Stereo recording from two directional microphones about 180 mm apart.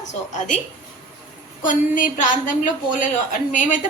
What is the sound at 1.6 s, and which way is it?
A woman's voice, 45° left (ahead or behind).